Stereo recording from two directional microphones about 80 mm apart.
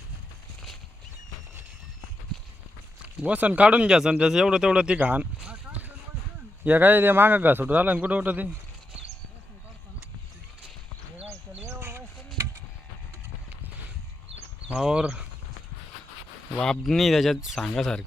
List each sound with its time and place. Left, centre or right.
3.0 s a man's voice: centre
11.7 s a sound: right
14.7 s speech: centre
16.6 s speech: centre